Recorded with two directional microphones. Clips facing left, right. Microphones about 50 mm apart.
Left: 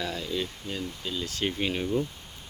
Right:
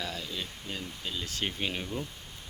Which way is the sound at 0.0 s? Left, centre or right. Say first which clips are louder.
Left 6 dB; centre.